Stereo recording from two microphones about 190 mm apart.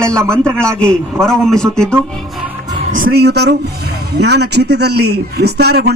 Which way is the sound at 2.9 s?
50° right (ahead or behind).